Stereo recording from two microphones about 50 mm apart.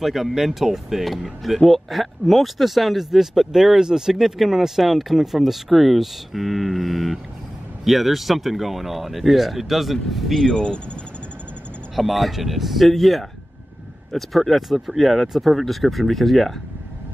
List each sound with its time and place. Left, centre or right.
0.0 s speech: centre
10.4 s speech: centre
11.9 s speech: centre